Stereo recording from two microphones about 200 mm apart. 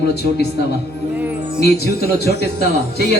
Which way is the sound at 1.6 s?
50° left (ahead or behind).